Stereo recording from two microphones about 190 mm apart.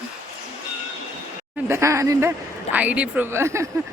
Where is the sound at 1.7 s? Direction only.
15° right (ahead or behind).